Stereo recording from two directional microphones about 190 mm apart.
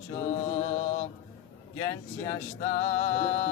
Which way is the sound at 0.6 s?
35° left (ahead or behind).